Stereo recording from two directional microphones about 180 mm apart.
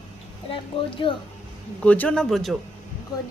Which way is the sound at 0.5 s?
30° left (ahead or behind).